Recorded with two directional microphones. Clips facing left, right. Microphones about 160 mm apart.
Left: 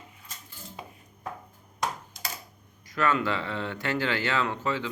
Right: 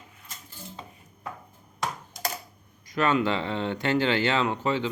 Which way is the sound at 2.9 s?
20° right (ahead or behind).